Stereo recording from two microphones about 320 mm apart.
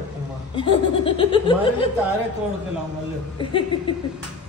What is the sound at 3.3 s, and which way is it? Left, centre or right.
Laughter, centre.